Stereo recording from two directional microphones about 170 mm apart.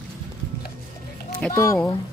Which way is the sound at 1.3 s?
5° left (ahead or behind).